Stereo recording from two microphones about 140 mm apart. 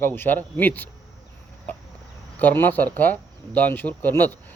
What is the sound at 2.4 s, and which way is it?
Speech, 15° left (ahead or behind).